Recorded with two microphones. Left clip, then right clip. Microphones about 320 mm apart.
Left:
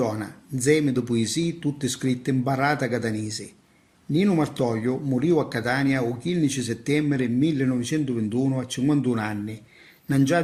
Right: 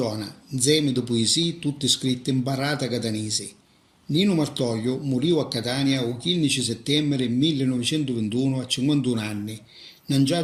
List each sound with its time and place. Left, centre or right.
0.0 s speech: left